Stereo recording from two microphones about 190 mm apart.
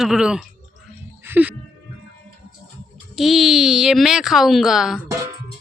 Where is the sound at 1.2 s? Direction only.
10° right (ahead or behind).